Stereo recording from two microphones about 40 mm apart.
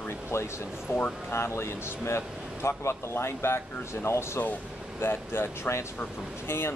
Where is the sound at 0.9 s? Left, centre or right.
Left.